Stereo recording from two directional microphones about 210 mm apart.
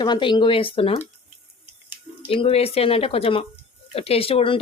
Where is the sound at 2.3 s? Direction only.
25° left (ahead or behind).